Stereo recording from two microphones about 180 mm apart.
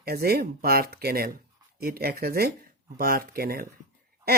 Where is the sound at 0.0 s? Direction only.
60° right (ahead or behind).